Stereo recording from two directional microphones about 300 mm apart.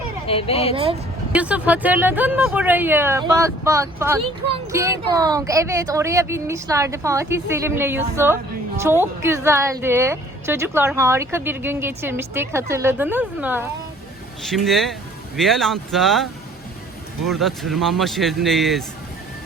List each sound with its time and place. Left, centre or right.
0.3 s speech: centre
1.3 s a woman's voice: centre